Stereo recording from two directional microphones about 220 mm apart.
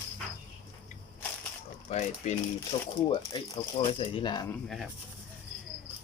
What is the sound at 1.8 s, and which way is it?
Mechanisms, 30° left (ahead or behind).